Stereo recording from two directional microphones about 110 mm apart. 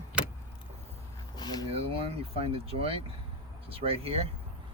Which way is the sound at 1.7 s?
60° right (ahead or behind).